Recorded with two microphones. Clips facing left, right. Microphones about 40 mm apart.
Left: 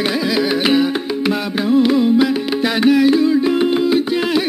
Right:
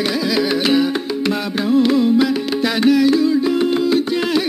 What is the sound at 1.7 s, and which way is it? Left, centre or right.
Music, centre.